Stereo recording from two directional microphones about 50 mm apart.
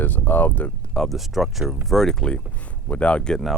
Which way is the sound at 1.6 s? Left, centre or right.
Right.